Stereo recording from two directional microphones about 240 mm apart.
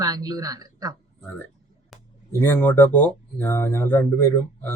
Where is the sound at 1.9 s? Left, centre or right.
Centre.